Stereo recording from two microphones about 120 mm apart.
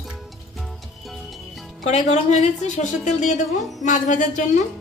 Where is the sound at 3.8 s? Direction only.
90° left.